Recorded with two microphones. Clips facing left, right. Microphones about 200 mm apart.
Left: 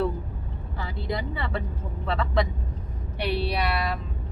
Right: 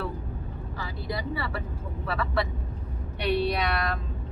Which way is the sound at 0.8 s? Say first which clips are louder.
Left 2 dB; 20° left (ahead or behind).